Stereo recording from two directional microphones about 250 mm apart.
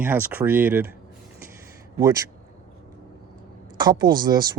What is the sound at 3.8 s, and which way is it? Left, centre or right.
Speech, centre.